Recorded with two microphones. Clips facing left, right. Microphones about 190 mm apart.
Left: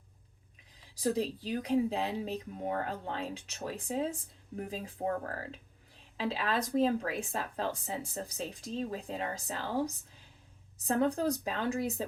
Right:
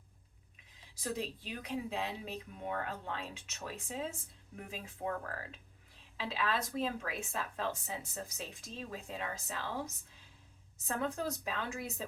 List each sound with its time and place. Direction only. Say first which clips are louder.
0.9 s speech: left 8 dB; 35° left (ahead or behind)